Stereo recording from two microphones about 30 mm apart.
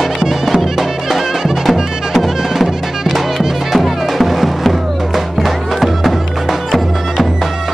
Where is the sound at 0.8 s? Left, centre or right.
Centre.